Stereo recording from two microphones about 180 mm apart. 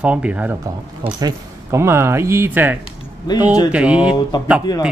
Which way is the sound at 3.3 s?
25° left (ahead or behind).